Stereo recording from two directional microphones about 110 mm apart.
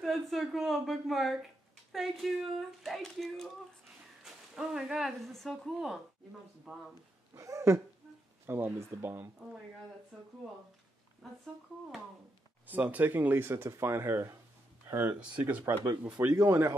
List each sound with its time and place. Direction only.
0.0 s speech: centre (ahead or behind)
7.3 s speech: 30° right (ahead or behind)
10.1 s speech: centre (ahead or behind)
12.6 s speech: 15° right (ahead or behind)